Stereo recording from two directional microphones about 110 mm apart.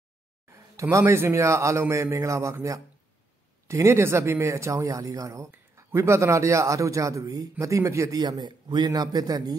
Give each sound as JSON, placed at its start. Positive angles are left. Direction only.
{"t": 0.5, "sound": "speech", "side_deg": -25}
{"t": 8.2, "sound": "a man's voice", "side_deg": -40}